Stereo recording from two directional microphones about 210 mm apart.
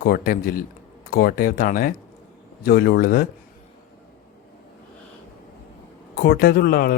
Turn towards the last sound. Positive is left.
turn(degrees=45)  # may be behind; listen again after turning